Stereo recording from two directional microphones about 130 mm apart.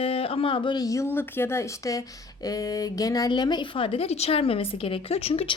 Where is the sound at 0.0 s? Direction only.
45° left (ahead or behind).